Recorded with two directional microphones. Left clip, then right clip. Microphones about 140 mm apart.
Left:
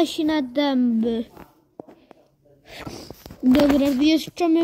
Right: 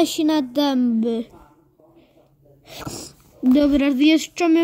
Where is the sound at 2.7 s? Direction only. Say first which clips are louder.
Right 3 dB; 15° right (ahead or behind).